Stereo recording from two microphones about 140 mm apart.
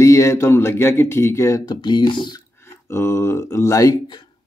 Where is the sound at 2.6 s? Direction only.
20° left (ahead or behind).